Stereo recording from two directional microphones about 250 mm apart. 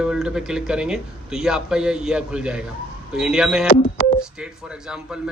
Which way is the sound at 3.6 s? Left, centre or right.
Left.